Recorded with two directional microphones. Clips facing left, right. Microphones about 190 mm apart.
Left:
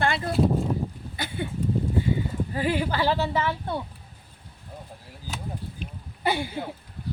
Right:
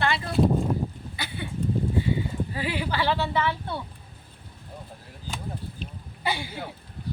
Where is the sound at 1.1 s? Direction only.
45° left (ahead or behind).